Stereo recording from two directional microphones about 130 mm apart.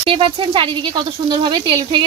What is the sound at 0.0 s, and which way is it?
Speech, 45° right (ahead or behind).